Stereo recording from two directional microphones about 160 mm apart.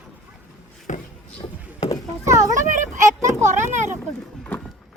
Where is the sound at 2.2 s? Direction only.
20° right (ahead or behind).